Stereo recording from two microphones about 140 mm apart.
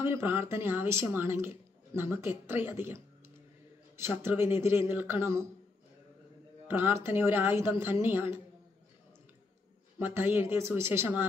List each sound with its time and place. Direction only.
0.0 s speech: 15° right (ahead or behind)
6.7 s speech: 15° right (ahead or behind)
9.9 s speech: 15° right (ahead or behind)